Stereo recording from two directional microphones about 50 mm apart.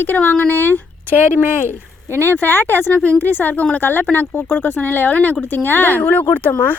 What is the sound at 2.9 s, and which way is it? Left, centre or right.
Speech, left.